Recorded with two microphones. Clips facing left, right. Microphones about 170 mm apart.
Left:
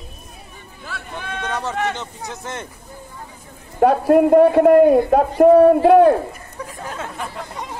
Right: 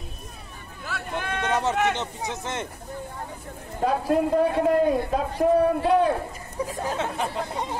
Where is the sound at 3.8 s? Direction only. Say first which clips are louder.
Left 9 dB; 60° left (ahead or behind).